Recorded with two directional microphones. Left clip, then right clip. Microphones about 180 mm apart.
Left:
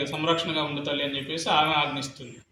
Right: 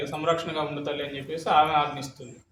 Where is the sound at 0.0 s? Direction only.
20° right (ahead or behind).